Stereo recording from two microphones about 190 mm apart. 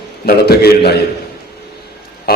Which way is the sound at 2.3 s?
55° left (ahead or behind).